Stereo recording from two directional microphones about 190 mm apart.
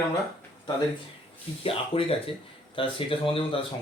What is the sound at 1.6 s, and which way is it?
Speech, 30° left (ahead or behind).